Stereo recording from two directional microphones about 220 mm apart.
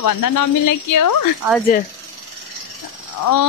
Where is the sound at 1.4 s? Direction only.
10° right (ahead or behind).